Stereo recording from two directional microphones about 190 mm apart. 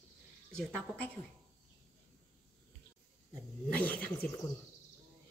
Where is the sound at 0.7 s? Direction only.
5° left (ahead or behind).